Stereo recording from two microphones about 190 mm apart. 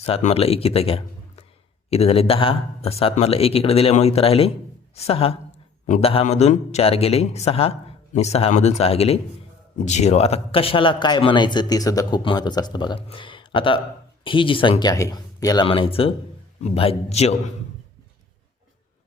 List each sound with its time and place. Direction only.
0.0 s a man's voice: 35° left (ahead or behind)